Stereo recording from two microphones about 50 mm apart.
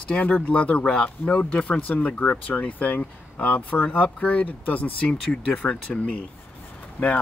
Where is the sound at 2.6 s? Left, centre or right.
Left.